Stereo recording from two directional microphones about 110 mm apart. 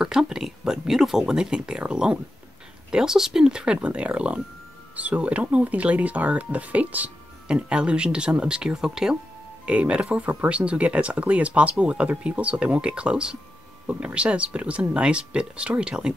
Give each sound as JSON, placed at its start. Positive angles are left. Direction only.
{"t": 0.0, "sound": "speech", "side_deg": -5}